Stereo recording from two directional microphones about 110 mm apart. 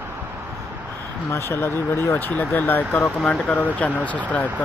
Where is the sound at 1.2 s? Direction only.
25° left (ahead or behind).